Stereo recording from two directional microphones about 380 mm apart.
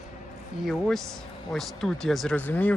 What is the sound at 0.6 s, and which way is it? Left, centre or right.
Speech, centre.